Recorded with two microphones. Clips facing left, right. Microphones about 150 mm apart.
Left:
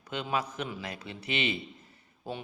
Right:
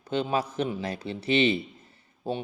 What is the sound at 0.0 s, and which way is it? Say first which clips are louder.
A man's voice: right 5 dB; 30° right (ahead or behind).